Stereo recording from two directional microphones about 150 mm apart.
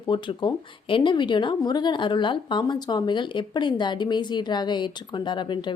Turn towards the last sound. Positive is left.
turn(degrees=30)  # may be behind; listen again after turning